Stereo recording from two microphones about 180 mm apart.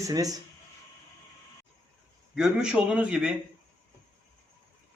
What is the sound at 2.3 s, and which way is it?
A man's voice, 5° right (ahead or behind).